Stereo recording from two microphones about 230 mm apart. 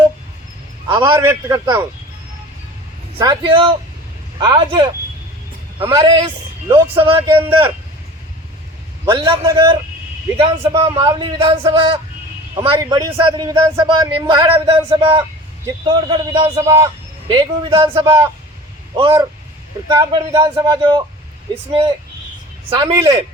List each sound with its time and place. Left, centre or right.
0.9 s a man's voice: centre
3.2 s a man's voice: centre
9.0 s a man's voice: right